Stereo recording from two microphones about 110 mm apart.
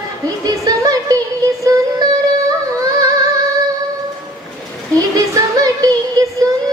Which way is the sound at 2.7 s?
30° right (ahead or behind).